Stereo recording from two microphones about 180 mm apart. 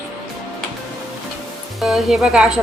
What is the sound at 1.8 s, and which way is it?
Speech, centre (ahead or behind).